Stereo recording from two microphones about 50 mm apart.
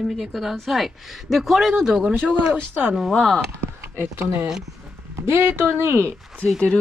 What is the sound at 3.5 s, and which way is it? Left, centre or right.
Speech, right.